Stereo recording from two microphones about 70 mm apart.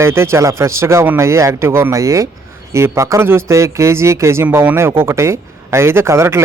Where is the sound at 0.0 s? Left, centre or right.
Right.